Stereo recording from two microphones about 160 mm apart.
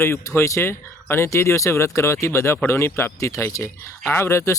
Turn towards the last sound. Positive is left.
turn(degrees=15)  # may be behind; listen again after turning